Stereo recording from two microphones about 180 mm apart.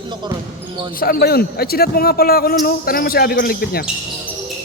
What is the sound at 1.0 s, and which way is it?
Speech, 60° left (ahead or behind).